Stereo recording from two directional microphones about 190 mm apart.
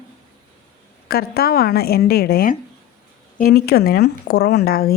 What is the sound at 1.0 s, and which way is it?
A woman's voice, 55° left (ahead or behind).